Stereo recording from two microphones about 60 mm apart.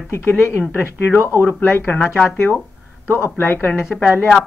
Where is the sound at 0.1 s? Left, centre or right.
Left.